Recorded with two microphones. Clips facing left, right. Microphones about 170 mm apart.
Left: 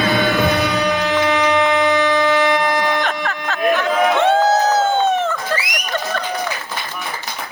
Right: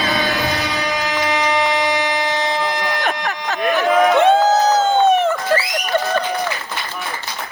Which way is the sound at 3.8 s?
15° right (ahead or behind).